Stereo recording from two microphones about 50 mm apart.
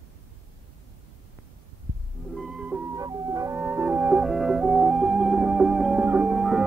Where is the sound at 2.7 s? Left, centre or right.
Right.